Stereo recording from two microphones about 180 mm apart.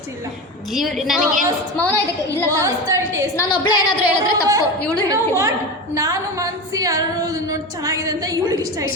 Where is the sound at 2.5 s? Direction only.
15° right (ahead or behind).